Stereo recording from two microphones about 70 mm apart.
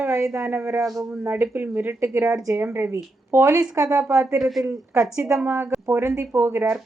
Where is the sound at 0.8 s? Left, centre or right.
Right.